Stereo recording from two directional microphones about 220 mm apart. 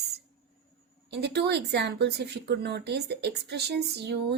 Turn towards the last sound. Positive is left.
turn(degrees=-50)  # may be behind; listen again after turning